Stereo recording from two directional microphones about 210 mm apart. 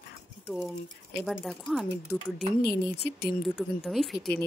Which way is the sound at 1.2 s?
Centre (ahead or behind).